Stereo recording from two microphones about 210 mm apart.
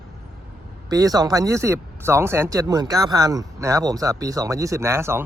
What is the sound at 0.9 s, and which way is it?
Speech, 15° right (ahead or behind).